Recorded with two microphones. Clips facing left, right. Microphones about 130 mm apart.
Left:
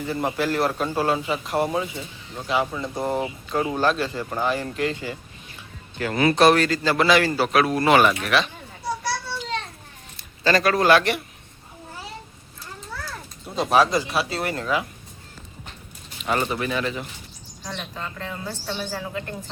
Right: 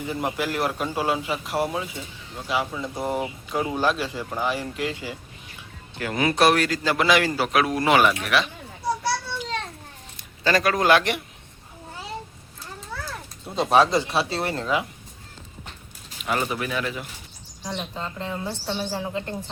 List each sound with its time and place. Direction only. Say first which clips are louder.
0.0 s a man's voice: left 2 dB; 10° right (ahead or behind)
10.4 s a man's voice: left 2 dB; 10° right (ahead or behind)
13.6 s a woman's voice: even; 25° right (ahead or behind)
16.2 s speech: left 2 dB; 5° right (ahead or behind)
17.6 s a woman's voice: right 2 dB; 20° right (ahead or behind)